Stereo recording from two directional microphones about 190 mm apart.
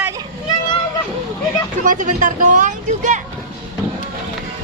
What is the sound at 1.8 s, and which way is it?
Speech, 40° right (ahead or behind).